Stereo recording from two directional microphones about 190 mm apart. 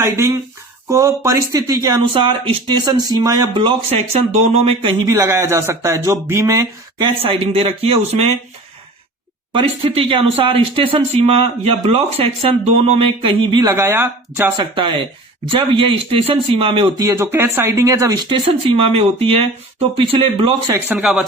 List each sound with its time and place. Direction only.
0.0 s speech: 15° right (ahead or behind)
7.2 s a man's voice: 30° right (ahead or behind)
9.5 s speech: 25° right (ahead or behind)
14.5 s speech: 25° right (ahead or behind)
20.8 s speech: 5° right (ahead or behind)